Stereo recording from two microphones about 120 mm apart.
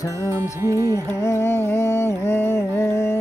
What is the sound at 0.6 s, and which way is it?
Music, 25° right (ahead or behind).